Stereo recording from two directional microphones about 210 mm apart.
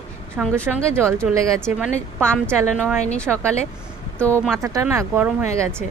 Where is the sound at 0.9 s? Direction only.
10° right (ahead or behind).